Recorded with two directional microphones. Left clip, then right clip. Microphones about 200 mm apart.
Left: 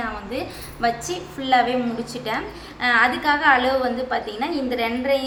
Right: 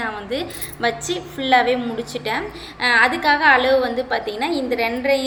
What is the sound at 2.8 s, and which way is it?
A woman's voice, 20° right (ahead or behind).